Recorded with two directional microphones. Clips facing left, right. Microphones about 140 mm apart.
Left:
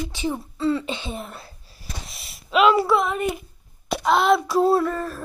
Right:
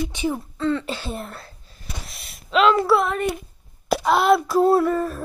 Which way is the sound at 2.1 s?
Centre (ahead or behind).